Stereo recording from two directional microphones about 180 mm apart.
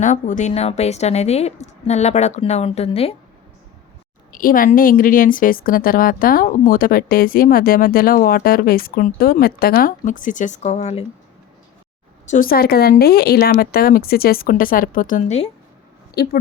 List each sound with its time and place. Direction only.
0.0 s a woman's voice: 45° left (ahead or behind)
4.3 s a woman's voice: 50° left (ahead or behind)
12.3 s a woman's voice: 50° left (ahead or behind)
16.2 s speech: 55° left (ahead or behind)